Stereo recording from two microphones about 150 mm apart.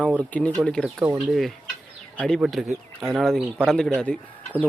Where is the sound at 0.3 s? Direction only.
10° left (ahead or behind).